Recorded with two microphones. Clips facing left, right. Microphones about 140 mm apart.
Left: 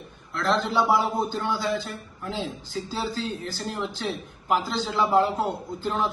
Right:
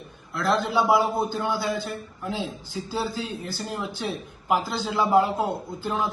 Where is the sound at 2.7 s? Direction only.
10° right (ahead or behind).